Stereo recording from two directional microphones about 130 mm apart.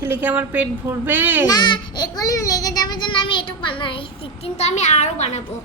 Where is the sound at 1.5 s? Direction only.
35° left (ahead or behind).